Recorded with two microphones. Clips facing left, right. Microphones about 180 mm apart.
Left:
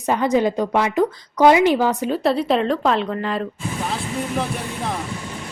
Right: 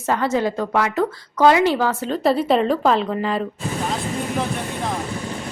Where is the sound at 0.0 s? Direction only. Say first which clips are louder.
Left 2 dB; 15° left (ahead or behind).